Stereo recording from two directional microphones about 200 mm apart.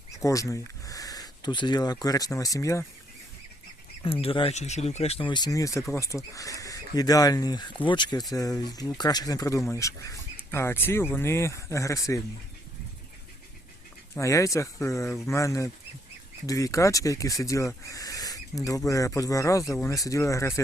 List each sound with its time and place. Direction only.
0.3 s speech: 15° left (ahead or behind)
4.0 s speech: 30° left (ahead or behind)
14.2 s speech: 15° left (ahead or behind)